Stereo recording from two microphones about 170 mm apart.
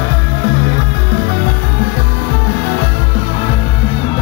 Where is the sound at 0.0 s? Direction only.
65° left (ahead or behind).